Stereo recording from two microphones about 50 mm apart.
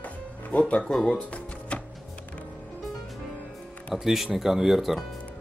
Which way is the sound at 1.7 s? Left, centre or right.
Left.